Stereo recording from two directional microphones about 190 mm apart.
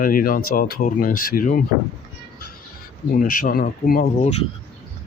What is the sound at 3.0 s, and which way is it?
Speech, 45° left (ahead or behind).